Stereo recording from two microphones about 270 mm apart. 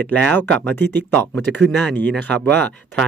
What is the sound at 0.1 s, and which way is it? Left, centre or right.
Speech, centre.